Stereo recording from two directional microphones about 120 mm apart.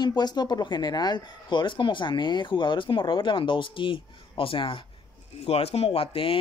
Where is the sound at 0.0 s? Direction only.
35° left (ahead or behind).